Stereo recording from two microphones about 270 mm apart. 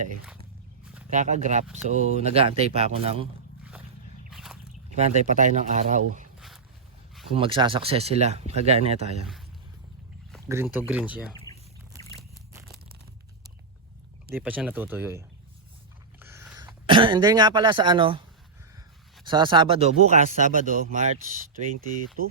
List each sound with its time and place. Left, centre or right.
1.1 s speech: right
4.3 s a sound: centre
4.9 s speech: right
7.3 s speech: centre
10.5 s speech: centre
11.5 s a sound: centre
14.3 s speech: centre
16.2 s a sound: centre
16.8 s speech: centre
19.2 s speech: centre